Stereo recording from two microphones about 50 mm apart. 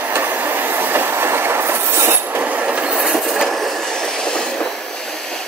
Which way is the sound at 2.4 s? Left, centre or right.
Right.